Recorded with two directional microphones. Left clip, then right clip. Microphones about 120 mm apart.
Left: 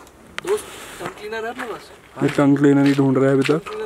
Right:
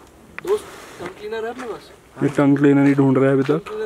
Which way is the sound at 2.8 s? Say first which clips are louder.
Right 1 dB; 5° right (ahead or behind).